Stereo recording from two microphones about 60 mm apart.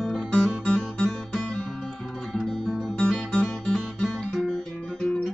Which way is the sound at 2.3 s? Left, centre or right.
Centre.